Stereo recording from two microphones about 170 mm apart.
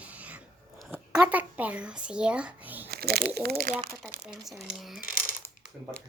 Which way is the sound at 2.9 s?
65° right (ahead or behind).